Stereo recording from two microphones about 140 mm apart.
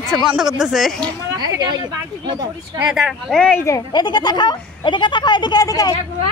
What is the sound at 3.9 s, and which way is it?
Speech, 30° left (ahead or behind).